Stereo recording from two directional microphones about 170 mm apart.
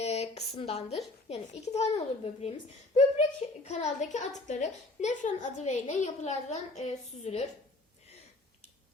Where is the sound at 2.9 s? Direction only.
40° left (ahead or behind).